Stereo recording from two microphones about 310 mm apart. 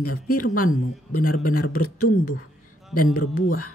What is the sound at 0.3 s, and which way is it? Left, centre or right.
Speech, left.